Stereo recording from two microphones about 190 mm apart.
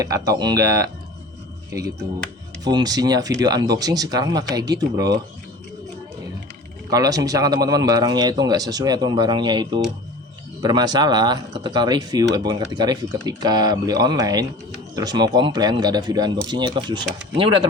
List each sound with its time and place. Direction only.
0.0 s speech: 20° right (ahead or behind)
6.9 s speech: 20° right (ahead or behind)